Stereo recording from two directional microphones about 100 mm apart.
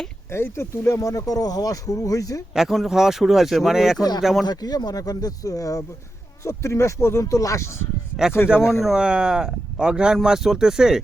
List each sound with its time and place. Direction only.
0.3 s speech: 25° left (ahead or behind)
2.6 s speech: centre (ahead or behind)
4.4 s speech: 40° left (ahead or behind)
8.4 s speech: 20° left (ahead or behind)
8.8 s speech: 5° right (ahead or behind)